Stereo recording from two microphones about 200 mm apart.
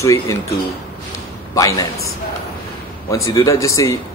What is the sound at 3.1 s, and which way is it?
Speech, 15° left (ahead or behind).